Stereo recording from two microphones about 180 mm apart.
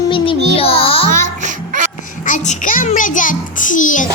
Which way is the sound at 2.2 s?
45° left (ahead or behind).